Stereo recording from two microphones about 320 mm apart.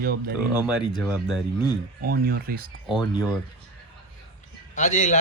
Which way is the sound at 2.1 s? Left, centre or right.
Right.